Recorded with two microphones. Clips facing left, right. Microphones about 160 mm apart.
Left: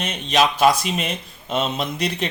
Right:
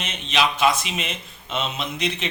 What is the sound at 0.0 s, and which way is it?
A man's voice, 40° left (ahead or behind).